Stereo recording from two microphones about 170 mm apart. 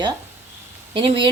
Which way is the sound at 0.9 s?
30° right (ahead or behind).